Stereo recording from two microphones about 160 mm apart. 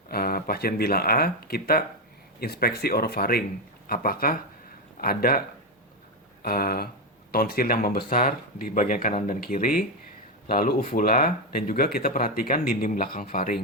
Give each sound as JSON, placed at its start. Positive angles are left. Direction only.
{"t": 0.1, "sound": "speech", "side_deg": 70}
{"t": 6.4, "sound": "speech", "side_deg": 70}